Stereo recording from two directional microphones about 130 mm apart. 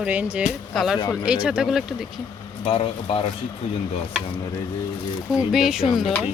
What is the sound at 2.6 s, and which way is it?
Speech, 45° left (ahead or behind).